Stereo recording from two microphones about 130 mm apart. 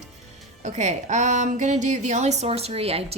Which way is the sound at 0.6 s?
65° right (ahead or behind).